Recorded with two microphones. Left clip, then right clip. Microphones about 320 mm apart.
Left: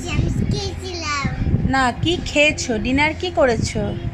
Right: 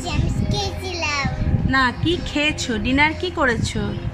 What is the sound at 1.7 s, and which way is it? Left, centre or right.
A woman's voice, centre.